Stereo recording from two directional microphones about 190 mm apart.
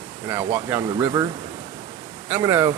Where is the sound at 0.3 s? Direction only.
15° right (ahead or behind).